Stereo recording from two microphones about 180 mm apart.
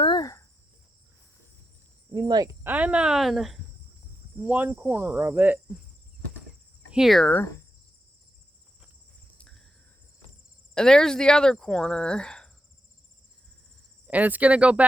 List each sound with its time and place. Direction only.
0.0 s cricket: 25° left (ahead or behind)
2.1 s cricket: 25° right (ahead or behind)
2.6 s speech: 10° right (ahead or behind)
4.4 s cricket: 10° right (ahead or behind)
6.9 s speech: centre (ahead or behind)
10.8 s speech: 5° left (ahead or behind)
14.1 s cricket: 10° right (ahead or behind)